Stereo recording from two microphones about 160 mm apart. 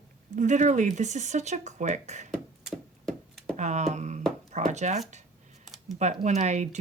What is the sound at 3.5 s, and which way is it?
A woman's voice, 45° right (ahead or behind).